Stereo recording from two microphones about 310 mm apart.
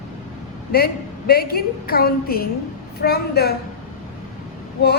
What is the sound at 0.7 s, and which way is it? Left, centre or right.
A woman's voice, left.